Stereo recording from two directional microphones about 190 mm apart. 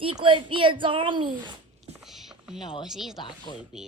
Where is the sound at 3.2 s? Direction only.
25° left (ahead or behind).